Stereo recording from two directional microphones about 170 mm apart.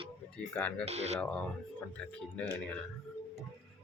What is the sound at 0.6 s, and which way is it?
Speech, 10° left (ahead or behind).